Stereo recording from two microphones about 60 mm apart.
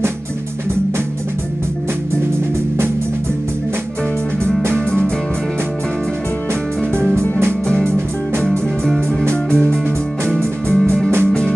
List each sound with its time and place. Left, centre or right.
4.7 s music: centre
7.6 s music: centre